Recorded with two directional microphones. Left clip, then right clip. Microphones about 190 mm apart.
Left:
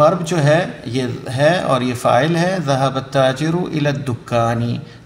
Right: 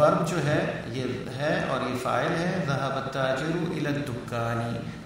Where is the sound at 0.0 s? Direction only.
30° left (ahead or behind).